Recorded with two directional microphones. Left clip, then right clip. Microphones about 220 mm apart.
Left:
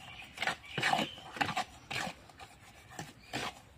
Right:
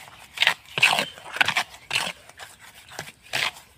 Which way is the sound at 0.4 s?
45° right (ahead or behind).